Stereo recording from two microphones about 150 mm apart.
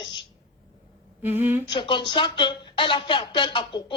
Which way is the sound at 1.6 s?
30° left (ahead or behind).